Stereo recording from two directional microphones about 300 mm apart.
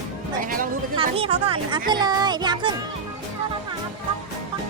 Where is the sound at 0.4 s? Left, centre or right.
Right.